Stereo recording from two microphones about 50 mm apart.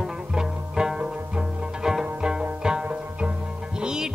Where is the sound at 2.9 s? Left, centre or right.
Right.